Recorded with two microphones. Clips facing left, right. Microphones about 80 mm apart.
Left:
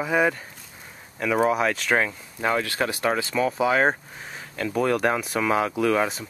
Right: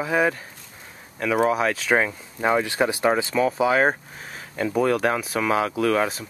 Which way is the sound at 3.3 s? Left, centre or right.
Centre.